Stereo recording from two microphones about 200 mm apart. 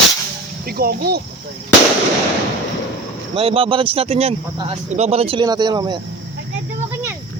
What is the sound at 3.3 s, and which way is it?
Speech, 30° right (ahead or behind).